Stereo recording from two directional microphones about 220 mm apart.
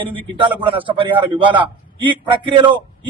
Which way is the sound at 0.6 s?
25° right (ahead or behind).